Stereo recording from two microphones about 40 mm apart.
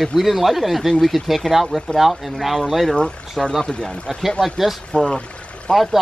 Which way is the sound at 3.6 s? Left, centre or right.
Centre.